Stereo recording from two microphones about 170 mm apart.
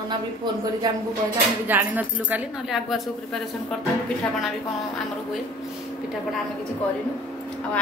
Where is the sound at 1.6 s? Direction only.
10° right (ahead or behind).